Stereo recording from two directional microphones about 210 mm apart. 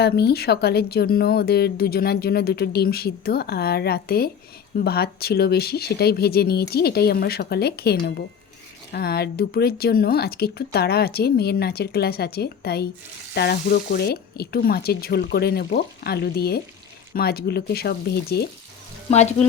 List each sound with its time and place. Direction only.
0.0 s speech: 50° left (ahead or behind)
19.1 s speech: 30° left (ahead or behind)